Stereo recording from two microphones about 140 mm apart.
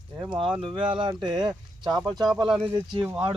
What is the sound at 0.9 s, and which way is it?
Speech, 35° right (ahead or behind).